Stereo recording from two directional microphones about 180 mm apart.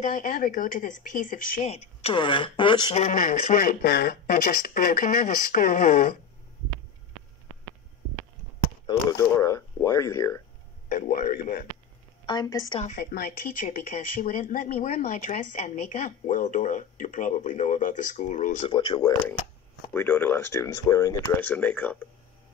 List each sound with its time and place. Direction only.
0.0 s speech: 45° left (ahead or behind)
1.7 s speech: 35° left (ahead or behind)
3.0 s speech: 45° left (ahead or behind)
8.8 s speech: 20° left (ahead or behind)
10.9 s speech: 45° left (ahead or behind)
12.3 s speech: 20° left (ahead or behind)
12.9 s speech: 60° left (ahead or behind)
18.7 s speech: 25° left (ahead or behind)
19.9 s speech: 10° left (ahead or behind)